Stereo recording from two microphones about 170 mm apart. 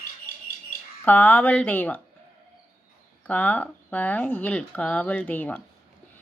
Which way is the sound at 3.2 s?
10° left (ahead or behind).